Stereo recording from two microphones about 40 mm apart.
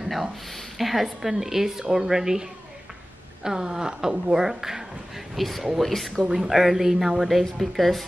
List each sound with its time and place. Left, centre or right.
0.0 s a sound: centre
0.5 s a woman's voice: centre
3.4 s a woman's voice: centre
6.3 s a woman's voice: centre